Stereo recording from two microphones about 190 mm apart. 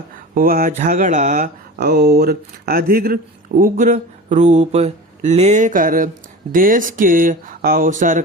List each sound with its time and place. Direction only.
0.3 s speech: 50° right (ahead or behind)
1.8 s speech: 55° right (ahead or behind); by 8.2 s 40° right (ahead or behind)